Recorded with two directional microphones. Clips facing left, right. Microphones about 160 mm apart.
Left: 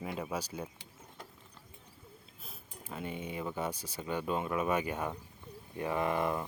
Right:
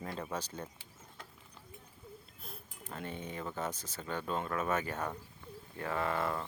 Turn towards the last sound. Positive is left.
turn(degrees=15)  # may be behind; listen again after turning